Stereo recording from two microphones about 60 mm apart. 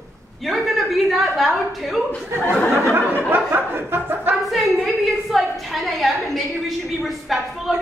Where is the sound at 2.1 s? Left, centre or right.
Centre.